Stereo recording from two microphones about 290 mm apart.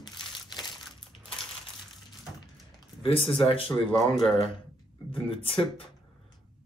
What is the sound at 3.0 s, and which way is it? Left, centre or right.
Speech, centre.